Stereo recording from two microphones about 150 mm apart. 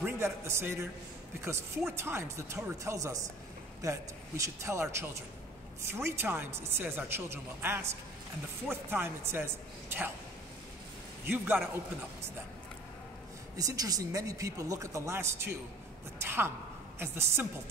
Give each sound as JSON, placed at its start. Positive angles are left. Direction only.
{"t": 0.0, "sound": "a man's voice", "side_deg": -15}
{"t": 1.9, "sound": "a woman's voice", "side_deg": -15}
{"t": 11.2, "sound": "a woman's voice", "side_deg": -10}
{"t": 13.6, "sound": "a woman's voice", "side_deg": -25}